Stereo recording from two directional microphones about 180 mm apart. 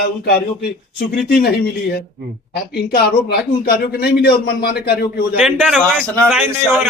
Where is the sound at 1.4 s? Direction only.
60° left (ahead or behind).